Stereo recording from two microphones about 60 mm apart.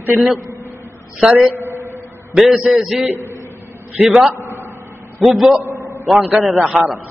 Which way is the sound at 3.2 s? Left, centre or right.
Left.